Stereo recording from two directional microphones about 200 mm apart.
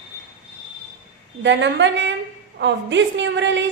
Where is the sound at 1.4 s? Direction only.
65° right (ahead or behind).